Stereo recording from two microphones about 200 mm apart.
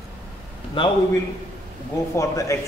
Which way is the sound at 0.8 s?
25° left (ahead or behind).